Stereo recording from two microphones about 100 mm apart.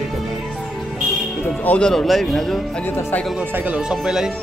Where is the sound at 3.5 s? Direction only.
15° right (ahead or behind).